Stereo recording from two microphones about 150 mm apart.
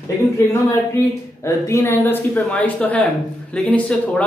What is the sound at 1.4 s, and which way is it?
Speech, 20° left (ahead or behind).